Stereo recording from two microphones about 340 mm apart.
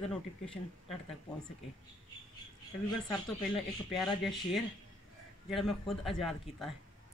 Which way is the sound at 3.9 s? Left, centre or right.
Centre.